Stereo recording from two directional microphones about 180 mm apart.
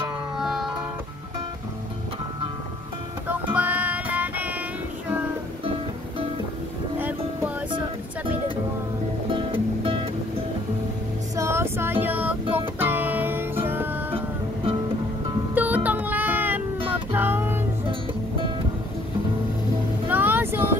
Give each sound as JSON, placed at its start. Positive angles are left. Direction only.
{"t": 0.4, "sound": "music", "side_deg": 0}
{"t": 3.5, "sound": "music", "side_deg": -10}
{"t": 7.0, "sound": "music", "side_deg": -10}
{"t": 9.3, "sound": "music", "side_deg": -30}
{"t": 11.3, "sound": "female singing", "side_deg": -15}
{"t": 12.5, "sound": "music", "side_deg": -10}
{"t": 14.1, "sound": "music", "side_deg": -30}
{"t": 15.5, "sound": "music", "side_deg": -10}
{"t": 20.1, "sound": "vehicle", "side_deg": -10}